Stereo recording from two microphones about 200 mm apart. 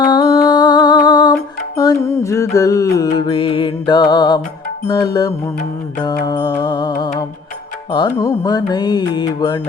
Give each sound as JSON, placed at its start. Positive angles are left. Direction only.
{"t": 0.0, "sound": "music", "side_deg": 20}
{"t": 3.0, "sound": "mantra", "side_deg": 20}